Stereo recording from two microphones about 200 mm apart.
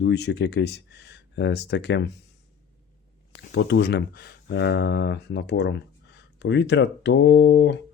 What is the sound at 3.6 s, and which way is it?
Speech, 60° left (ahead or behind).